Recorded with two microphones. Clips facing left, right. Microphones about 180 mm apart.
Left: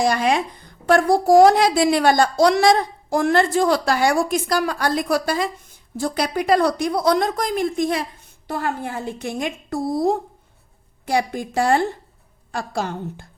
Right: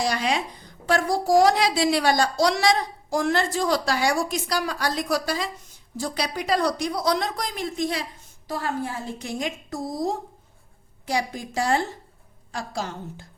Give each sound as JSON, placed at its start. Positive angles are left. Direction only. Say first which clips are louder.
{"t": 0.0, "sound": "a woman's voice", "louder": "left 6 dB", "side_deg": 50}